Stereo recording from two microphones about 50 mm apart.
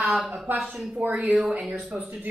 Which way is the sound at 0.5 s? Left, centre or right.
Right.